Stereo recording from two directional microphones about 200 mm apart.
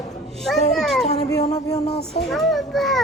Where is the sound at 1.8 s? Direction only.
30° left (ahead or behind).